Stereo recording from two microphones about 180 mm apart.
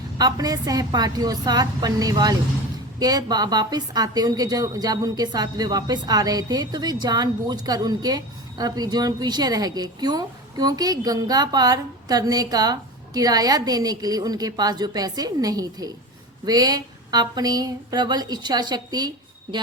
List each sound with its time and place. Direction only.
0.2 s a woman's voice: 20° right (ahead or behind)